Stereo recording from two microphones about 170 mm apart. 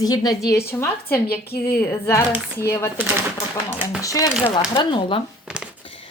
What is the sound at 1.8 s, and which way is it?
Speech, 15° left (ahead or behind).